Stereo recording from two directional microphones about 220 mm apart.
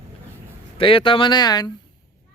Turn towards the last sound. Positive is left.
turn(degrees=20)  # may be behind; listen again after turning